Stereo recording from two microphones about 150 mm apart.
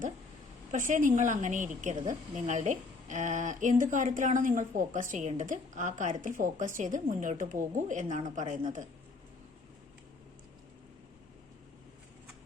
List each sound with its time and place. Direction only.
0.7 s a woman's voice: 55° right (ahead or behind)